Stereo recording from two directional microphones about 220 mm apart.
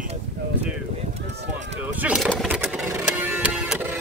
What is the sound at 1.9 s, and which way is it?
Music, 5° right (ahead or behind).